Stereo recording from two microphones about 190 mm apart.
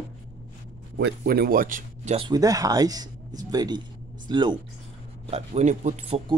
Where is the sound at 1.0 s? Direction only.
55° right (ahead or behind).